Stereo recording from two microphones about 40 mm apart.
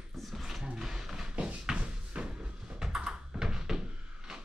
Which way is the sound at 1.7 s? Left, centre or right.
Right.